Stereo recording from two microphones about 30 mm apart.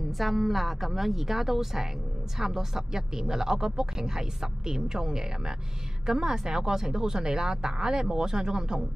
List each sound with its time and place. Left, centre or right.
0.2 s speech: centre; by 8.8 s right